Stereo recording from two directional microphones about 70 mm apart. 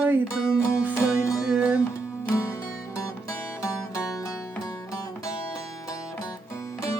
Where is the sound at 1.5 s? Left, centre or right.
Centre.